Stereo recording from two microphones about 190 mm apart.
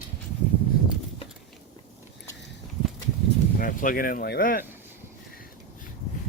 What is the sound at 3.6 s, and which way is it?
Speech, 45° left (ahead or behind).